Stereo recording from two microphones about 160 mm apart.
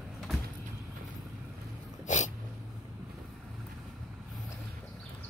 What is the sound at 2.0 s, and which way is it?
Dog, 50° left (ahead or behind).